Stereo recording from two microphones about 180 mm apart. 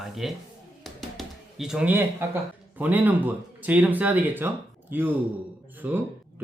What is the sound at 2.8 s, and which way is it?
Speech, 10° right (ahead or behind).